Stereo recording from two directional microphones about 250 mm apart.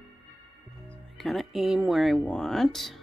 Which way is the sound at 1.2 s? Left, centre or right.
Centre.